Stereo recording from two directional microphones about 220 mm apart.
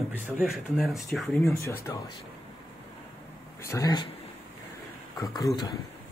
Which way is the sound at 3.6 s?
15° left (ahead or behind).